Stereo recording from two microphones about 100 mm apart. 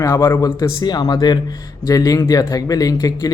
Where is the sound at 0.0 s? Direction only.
35° left (ahead or behind).